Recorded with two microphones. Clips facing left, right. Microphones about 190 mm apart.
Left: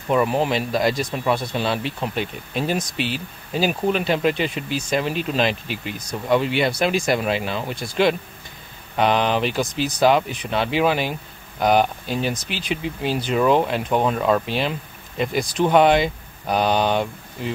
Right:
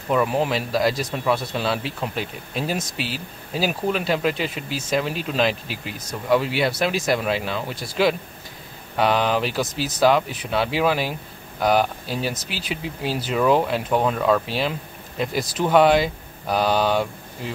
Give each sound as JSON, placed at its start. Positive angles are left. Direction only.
{"t": 0.1, "sound": "speech", "side_deg": 0}